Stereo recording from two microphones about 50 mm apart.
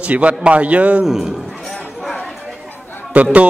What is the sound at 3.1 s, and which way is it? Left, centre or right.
Speech, right.